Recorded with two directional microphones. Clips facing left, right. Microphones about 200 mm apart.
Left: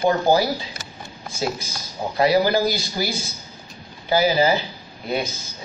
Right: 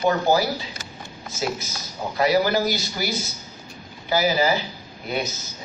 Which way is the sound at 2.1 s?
30° left (ahead or behind).